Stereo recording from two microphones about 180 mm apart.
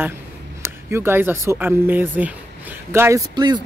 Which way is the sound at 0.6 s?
15° right (ahead or behind).